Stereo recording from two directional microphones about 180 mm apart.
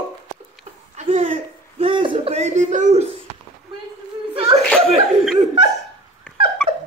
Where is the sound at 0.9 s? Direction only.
45° right (ahead or behind).